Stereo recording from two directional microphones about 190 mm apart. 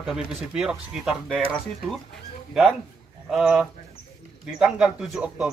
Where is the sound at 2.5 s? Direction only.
Centre (ahead or behind).